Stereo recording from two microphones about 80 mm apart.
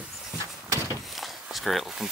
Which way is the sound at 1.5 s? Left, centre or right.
Centre.